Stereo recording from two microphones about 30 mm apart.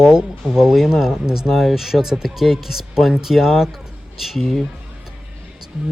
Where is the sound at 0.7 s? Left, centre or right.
Centre.